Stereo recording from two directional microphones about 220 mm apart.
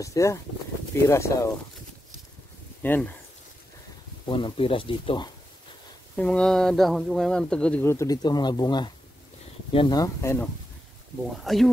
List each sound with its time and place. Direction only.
0.0 s speech: 15° left (ahead or behind)
2.8 s speech: 10° left (ahead or behind)
4.3 s speech: 25° left (ahead or behind)
6.1 s speech: 5° left (ahead or behind)
11.3 s speech: centre (ahead or behind)